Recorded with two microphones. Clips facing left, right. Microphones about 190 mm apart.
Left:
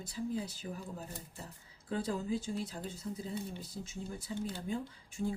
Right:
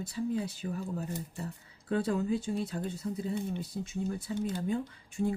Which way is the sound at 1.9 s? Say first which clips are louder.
Right 5 dB; 60° right (ahead or behind).